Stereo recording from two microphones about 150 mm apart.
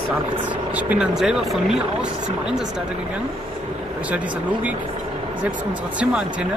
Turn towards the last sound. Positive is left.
turn(degrees=-5)  # may be behind; listen again after turning